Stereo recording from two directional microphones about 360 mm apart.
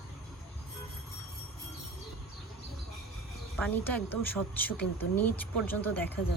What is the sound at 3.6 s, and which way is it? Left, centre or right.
Speech, centre.